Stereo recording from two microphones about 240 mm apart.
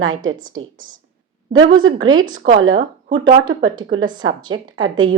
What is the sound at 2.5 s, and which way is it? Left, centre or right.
Speech, right.